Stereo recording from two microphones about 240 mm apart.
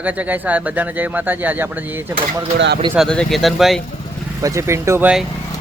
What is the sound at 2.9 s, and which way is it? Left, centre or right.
Speech, centre.